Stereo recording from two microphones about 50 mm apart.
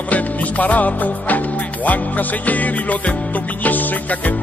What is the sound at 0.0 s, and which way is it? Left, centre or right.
Music, left.